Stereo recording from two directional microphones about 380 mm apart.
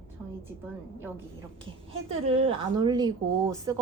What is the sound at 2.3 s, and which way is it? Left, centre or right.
Speech, centre.